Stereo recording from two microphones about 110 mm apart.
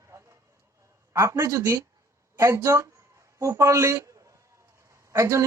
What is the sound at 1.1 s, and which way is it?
Speech, 25° right (ahead or behind).